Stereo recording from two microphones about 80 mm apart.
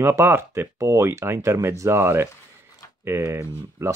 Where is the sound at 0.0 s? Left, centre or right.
Right.